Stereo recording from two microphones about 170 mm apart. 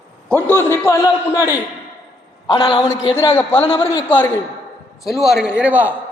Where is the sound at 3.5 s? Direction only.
30° left (ahead or behind).